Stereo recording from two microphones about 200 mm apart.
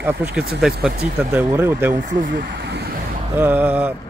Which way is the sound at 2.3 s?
60° right (ahead or behind).